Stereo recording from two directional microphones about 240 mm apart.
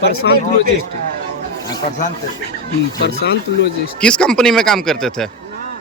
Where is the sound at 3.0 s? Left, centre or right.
Left.